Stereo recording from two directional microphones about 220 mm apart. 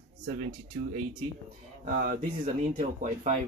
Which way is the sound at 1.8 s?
40° right (ahead or behind).